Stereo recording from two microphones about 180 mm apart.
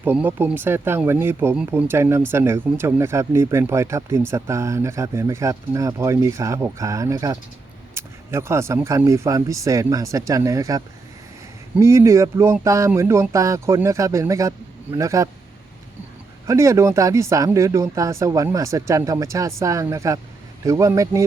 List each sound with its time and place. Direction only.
0.0 s speech: 10° right (ahead or behind)
16.5 s speech: 15° right (ahead or behind)